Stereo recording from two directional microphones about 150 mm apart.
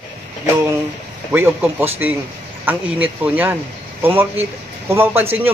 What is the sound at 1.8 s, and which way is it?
A man's voice, 15° right (ahead or behind).